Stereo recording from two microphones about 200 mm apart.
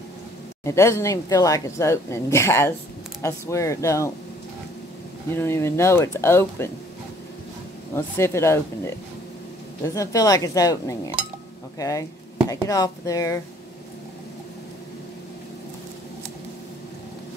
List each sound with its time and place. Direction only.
0.7 s a woman's voice: 15° left (ahead or behind)
5.3 s a woman's voice: 10° left (ahead or behind)
7.9 s a woman's voice: 15° left (ahead or behind)
9.9 s a woman's voice: 15° left (ahead or behind)